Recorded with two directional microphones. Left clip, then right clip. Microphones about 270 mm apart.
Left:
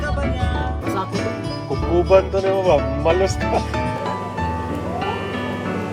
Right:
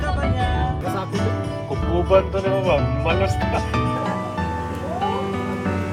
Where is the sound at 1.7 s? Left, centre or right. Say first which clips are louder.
Left 3 dB; left.